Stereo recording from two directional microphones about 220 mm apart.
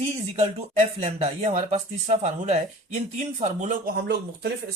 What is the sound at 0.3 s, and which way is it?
Speech, 25° right (ahead or behind).